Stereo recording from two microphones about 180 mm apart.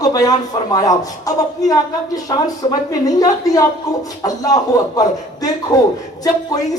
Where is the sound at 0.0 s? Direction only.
20° left (ahead or behind).